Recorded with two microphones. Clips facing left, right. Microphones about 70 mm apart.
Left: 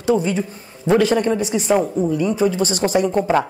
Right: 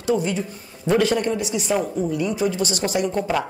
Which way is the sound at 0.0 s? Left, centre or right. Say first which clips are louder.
Left 4 dB; left.